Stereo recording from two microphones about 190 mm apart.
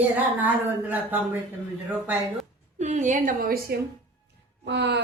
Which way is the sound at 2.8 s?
40° right (ahead or behind).